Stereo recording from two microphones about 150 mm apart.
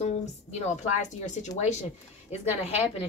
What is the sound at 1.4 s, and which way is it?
A woman's voice, 50° left (ahead or behind).